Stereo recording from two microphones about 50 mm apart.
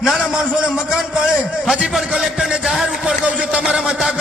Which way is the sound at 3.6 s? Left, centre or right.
Centre.